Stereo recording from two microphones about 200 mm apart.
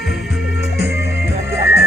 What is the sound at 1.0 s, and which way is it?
Music, 55° left (ahead or behind).